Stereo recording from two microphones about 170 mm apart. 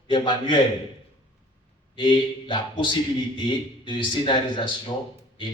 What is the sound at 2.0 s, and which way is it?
A man's voice, 30° left (ahead or behind).